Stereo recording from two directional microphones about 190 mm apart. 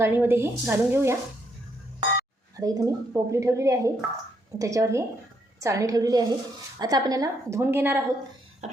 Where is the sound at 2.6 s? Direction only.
20° right (ahead or behind).